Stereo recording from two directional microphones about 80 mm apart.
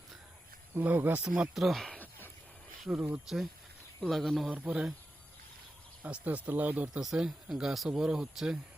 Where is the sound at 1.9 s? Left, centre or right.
Left.